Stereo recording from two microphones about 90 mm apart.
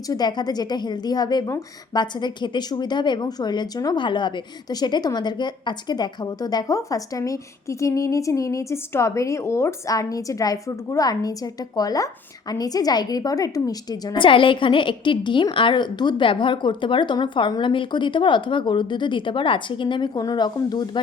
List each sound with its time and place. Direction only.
0.1 s a woman's voice: 50° left (ahead or behind)
4.0 s a woman's voice: 60° left (ahead or behind)
14.2 s a woman's voice: 70° left (ahead or behind)
20.1 s a woman's voice: 50° left (ahead or behind)